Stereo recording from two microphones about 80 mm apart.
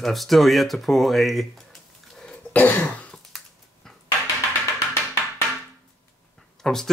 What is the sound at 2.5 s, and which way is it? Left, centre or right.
Throat clearing, left.